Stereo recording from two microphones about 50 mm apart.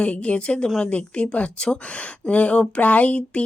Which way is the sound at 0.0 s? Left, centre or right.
Left.